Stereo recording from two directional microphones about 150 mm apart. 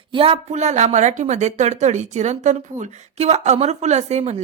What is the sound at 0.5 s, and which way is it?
Speech, 50° right (ahead or behind).